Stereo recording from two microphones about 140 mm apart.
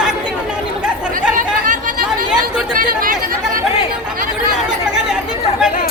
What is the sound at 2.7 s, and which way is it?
Speech, 80° right.